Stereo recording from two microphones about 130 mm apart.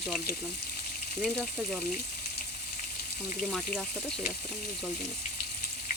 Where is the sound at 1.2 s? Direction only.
Centre (ahead or behind).